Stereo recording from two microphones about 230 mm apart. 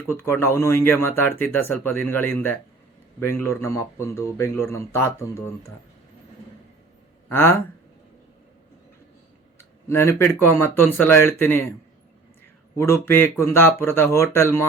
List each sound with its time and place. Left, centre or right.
0.0 s speech: centre
7.3 s speech: centre
9.6 s a sound: centre
10.4 s speech: centre
12.7 s speech: centre